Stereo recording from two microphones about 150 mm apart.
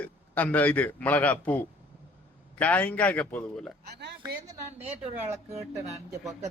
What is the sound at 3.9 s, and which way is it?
Speech, 90° right.